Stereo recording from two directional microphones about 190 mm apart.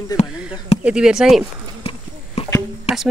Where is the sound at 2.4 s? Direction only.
35° left (ahead or behind).